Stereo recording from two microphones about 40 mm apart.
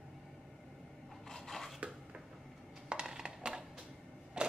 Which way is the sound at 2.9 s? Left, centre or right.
Right.